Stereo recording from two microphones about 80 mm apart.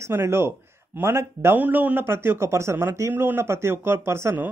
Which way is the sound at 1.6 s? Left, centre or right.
Right.